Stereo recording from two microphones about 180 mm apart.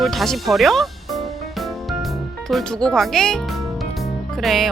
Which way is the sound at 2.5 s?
Centre (ahead or behind).